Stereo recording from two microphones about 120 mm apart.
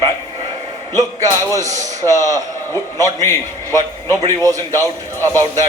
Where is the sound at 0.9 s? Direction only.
30° right (ahead or behind).